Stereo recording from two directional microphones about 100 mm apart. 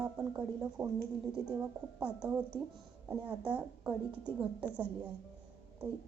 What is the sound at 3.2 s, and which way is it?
Speech, 15° right (ahead or behind).